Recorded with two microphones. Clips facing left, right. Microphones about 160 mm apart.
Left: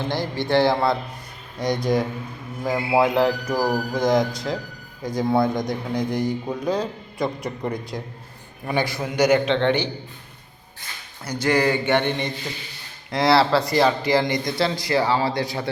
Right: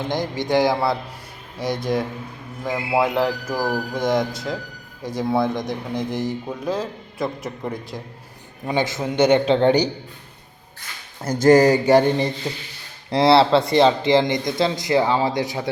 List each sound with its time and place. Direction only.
0.1 s a man's voice: 15° right (ahead or behind)
8.6 s speech: 20° right (ahead or behind)
9.6 s speech: 40° right (ahead or behind)
11.2 s speech: 45° right (ahead or behind); by 15.7 s 15° right (ahead or behind)